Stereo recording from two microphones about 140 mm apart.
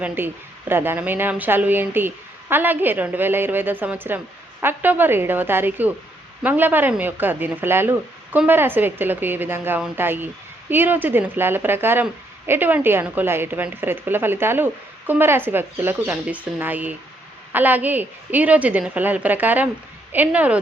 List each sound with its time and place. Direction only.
0.0 s a woman's voice: 15° right (ahead or behind)